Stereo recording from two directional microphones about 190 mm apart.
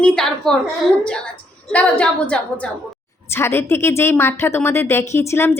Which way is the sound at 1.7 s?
5° left (ahead or behind).